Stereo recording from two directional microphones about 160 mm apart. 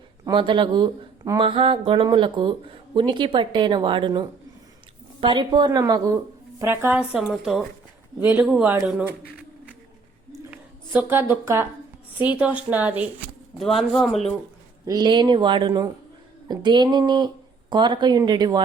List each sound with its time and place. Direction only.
0.3 s speech: 30° right (ahead or behind); by 7.7 s centre (ahead or behind)
8.2 s a woman's voice: 15° right (ahead or behind)
10.5 s a woman's voice: 10° right (ahead or behind)
13.6 s speech: centre (ahead or behind)
14.8 s a woman's voice: 25° right (ahead or behind)